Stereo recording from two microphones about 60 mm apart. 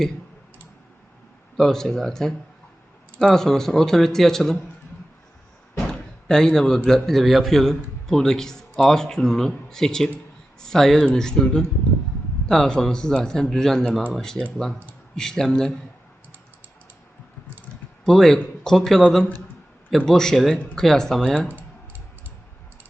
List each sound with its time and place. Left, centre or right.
1.5 s a man's voice: centre
5.7 s a man's voice: centre
15.1 s a man's voice: centre
18.0 s a man's voice: centre
20.1 s a man's voice: centre
21.4 s typing: right